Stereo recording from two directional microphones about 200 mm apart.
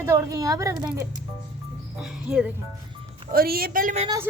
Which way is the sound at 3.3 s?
50° right (ahead or behind).